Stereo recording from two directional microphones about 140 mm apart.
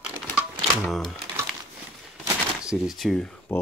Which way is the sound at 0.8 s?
Centre (ahead or behind).